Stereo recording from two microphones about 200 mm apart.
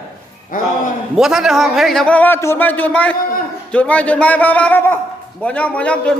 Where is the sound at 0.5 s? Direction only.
40° left (ahead or behind).